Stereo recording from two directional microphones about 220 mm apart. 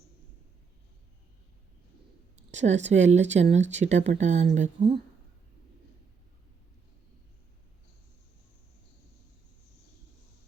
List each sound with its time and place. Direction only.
2.5 s speech: 30° right (ahead or behind)